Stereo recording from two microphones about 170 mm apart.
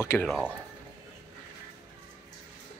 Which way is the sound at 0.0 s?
15° left (ahead or behind).